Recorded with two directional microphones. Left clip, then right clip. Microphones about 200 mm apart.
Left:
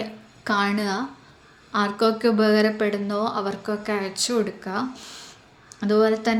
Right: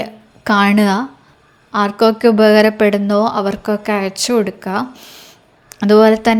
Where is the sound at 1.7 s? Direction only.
35° right (ahead or behind).